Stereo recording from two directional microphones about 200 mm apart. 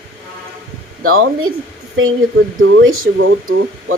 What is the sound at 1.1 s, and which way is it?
Speech, 90° right.